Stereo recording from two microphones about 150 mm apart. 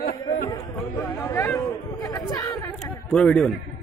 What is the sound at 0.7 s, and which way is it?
Chatter, 15° left (ahead or behind).